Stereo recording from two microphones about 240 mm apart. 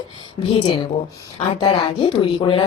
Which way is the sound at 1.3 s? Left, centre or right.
Left.